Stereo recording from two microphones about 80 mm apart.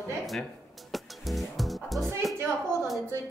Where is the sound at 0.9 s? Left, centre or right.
Centre.